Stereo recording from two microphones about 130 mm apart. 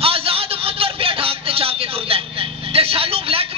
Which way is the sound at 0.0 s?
45° right (ahead or behind).